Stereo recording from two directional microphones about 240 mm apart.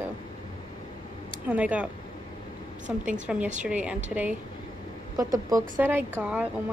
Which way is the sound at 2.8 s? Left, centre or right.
Right.